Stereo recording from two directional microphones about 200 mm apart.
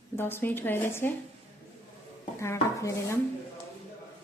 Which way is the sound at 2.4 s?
15° left (ahead or behind).